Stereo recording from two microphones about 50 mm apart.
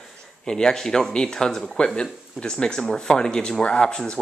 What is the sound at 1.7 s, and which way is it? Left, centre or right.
Speech, centre.